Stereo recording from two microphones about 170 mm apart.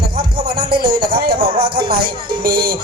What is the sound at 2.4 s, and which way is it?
Speech, 65° right (ahead or behind).